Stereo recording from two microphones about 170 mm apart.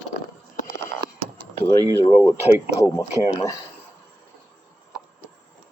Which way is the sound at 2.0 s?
35° left (ahead or behind).